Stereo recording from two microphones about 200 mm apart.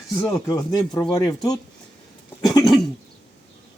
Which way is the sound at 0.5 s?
20° left (ahead or behind).